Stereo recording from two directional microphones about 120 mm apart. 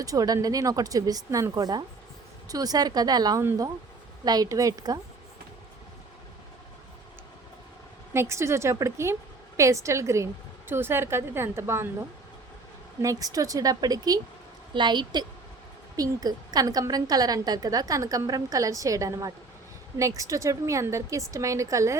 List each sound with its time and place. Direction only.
0.0 s a woman's voice: 30° right (ahead or behind)
8.1 s a woman's voice: 25° right (ahead or behind)
13.0 s a woman's voice: 30° right (ahead or behind)